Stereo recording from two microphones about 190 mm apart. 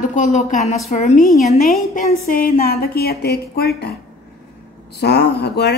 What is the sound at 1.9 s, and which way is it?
A woman's voice, 50° left (ahead or behind).